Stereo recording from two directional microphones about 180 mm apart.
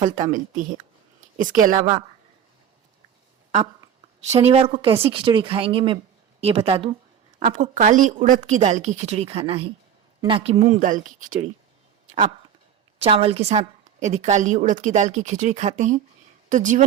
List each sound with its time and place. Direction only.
0.0 s speech: 45° right (ahead or behind)
4.3 s a woman's voice: 35° right (ahead or behind)
10.8 s speech: 45° right (ahead or behind)
13.0 s a woman's voice: 35° right (ahead or behind)